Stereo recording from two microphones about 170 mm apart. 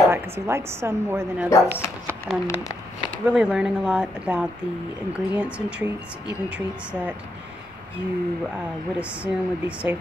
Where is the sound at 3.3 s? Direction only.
5° right (ahead or behind).